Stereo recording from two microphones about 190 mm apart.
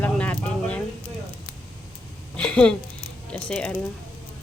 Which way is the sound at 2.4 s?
5° left (ahead or behind).